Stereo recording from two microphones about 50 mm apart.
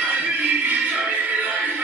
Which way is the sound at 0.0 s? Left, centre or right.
Right.